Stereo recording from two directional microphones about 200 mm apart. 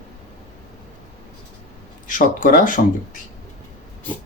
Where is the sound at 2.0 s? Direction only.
40° left (ahead or behind).